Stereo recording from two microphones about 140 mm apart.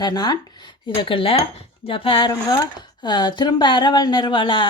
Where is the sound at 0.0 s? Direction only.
30° left (ahead or behind).